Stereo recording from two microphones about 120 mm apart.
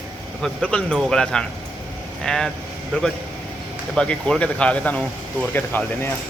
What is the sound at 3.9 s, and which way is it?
Speech, 10° left (ahead or behind).